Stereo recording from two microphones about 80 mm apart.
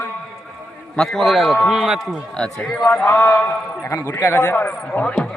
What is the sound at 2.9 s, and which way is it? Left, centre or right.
A man's voice, left.